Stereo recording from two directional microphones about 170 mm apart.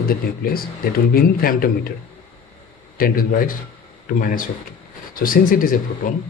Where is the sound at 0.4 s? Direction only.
60° left (ahead or behind).